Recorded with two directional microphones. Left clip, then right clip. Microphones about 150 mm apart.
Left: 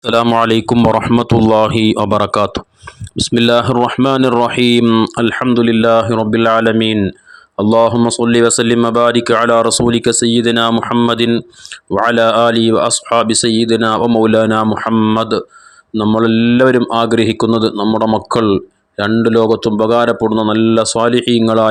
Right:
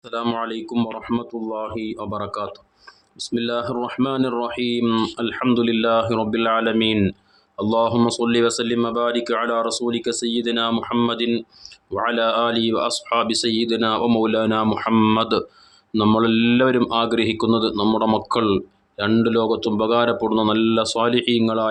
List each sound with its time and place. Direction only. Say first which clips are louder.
0.0 s speech: left 13 dB; 65° left (ahead or behind)
1.2 s speech: left 17 dB; 90° left; by 5.4 s 55° left (ahead or behind)
5.4 s speech: left 6 dB; 45° left (ahead or behind)
14.8 s speech: left 5 dB; 30° left (ahead or behind)
16.1 s speech: left 8 dB; 40° left (ahead or behind)
17.8 s speech: left 6 dB; 35° left (ahead or behind); by 21.7 s 60° left (ahead or behind)